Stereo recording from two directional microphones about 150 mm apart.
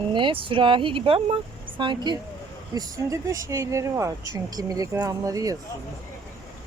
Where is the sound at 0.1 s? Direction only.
35° right (ahead or behind).